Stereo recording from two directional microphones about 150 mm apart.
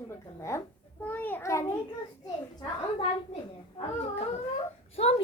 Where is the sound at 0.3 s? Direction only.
20° left (ahead or behind).